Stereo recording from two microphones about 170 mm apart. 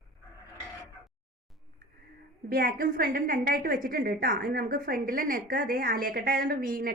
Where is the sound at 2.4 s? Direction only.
60° right (ahead or behind).